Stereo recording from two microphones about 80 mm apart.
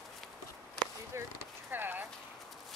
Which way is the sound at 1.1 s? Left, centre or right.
Right.